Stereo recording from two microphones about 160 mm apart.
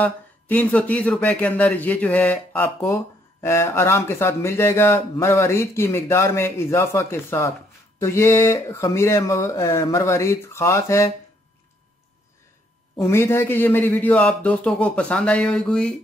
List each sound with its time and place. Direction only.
0.0 s a man's voice: 10° left (ahead or behind)
13.0 s a man's voice: 15° left (ahead or behind)